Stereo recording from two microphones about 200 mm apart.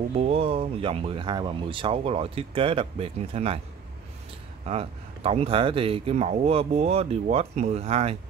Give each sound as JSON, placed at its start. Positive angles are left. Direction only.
{"t": 0.1, "sound": "speech", "side_deg": -30}
{"t": 4.6, "sound": "speech", "side_deg": -30}